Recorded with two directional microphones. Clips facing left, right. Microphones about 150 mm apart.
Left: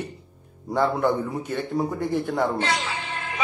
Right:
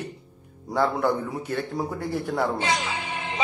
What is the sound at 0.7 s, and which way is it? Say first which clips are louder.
A man's voice: left 1 dB; 5° right (ahead or behind).